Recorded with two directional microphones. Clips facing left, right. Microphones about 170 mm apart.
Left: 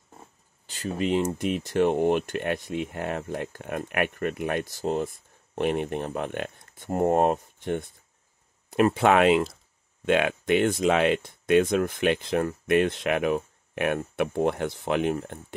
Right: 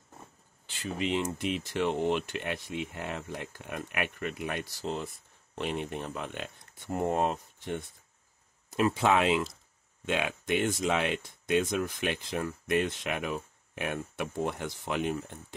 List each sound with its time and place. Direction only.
0.7 s speech: 40° left (ahead or behind)